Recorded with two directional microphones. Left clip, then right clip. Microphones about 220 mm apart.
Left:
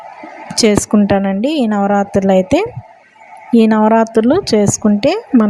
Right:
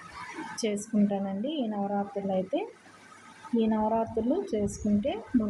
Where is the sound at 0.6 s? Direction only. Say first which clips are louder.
Left 18 dB; 50° left (ahead or behind).